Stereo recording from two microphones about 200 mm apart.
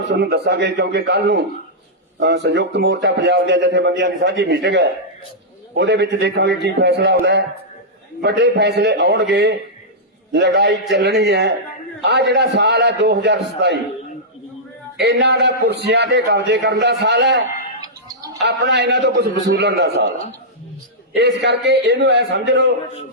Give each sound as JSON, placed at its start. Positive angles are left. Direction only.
{"t": 0.1, "sound": "a man's voice", "side_deg": -55}
{"t": 14.9, "sound": "a man's voice", "side_deg": -55}
{"t": 17.7, "sound": "music", "side_deg": -20}
{"t": 18.4, "sound": "a man's voice", "side_deg": -55}
{"t": 21.2, "sound": "a man's voice", "side_deg": -60}